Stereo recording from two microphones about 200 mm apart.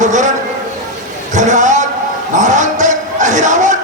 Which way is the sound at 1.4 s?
35° right (ahead or behind).